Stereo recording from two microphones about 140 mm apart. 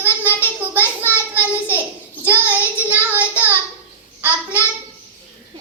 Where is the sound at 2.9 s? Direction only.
10° right (ahead or behind).